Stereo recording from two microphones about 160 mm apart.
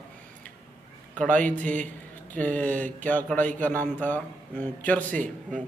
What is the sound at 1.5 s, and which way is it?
Speech, 50° right (ahead or behind).